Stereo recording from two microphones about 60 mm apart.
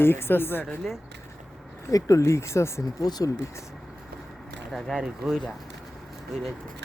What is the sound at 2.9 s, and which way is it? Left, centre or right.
Speech, left.